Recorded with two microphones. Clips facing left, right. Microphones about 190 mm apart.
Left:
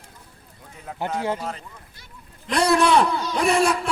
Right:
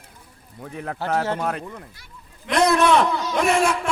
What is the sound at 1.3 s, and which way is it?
Speech, 60° right (ahead or behind).